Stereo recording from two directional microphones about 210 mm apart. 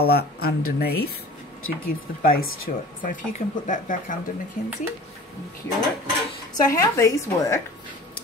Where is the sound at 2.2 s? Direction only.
45° left (ahead or behind).